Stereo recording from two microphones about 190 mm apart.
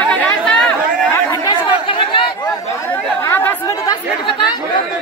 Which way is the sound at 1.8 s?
25° left (ahead or behind).